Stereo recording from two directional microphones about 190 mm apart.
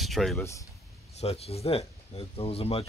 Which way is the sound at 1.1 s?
30° left (ahead or behind).